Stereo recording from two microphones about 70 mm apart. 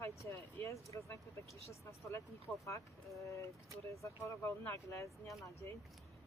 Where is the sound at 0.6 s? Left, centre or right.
Left.